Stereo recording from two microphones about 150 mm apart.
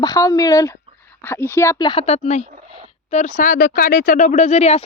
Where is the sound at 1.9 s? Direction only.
40° left (ahead or behind).